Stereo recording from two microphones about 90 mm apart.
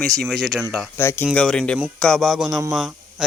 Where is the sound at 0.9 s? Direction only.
25° left (ahead or behind).